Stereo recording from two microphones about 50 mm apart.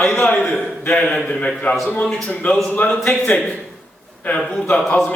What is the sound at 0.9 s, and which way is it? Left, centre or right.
A man's voice, centre.